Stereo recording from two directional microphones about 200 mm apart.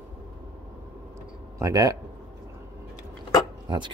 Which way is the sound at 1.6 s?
15° right (ahead or behind).